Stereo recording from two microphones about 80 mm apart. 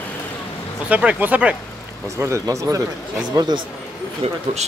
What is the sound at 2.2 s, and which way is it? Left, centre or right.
A man's voice, right.